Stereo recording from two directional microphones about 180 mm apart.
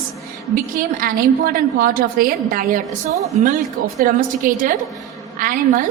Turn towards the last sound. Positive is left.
turn(degrees=-50)  # may be behind; listen again after turning